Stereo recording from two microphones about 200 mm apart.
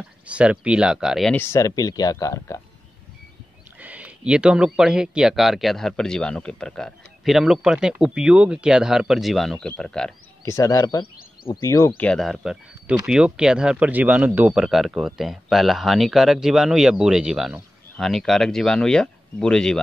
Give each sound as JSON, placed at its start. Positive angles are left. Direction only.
{"t": 0.3, "sound": "speech", "side_deg": -5}
{"t": 3.8, "sound": "speech", "side_deg": -5}
{"t": 10.4, "sound": "speech", "side_deg": 15}
{"t": 12.0, "sound": "speech", "side_deg": 5}